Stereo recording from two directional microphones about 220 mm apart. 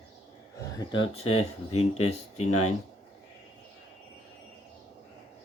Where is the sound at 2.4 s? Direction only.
85° left.